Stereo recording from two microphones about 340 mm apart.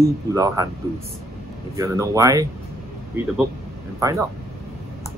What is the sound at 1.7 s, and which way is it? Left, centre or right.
Speech, centre.